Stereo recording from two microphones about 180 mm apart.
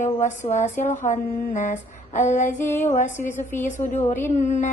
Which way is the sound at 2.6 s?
10° left (ahead or behind).